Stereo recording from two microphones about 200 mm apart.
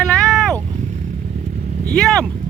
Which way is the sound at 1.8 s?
5° left (ahead or behind).